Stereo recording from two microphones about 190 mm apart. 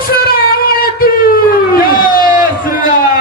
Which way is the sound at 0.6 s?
50° left (ahead or behind).